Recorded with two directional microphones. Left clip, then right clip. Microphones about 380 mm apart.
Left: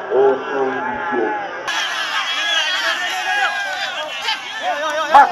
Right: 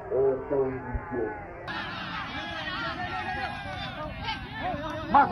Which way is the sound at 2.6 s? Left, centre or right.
Left.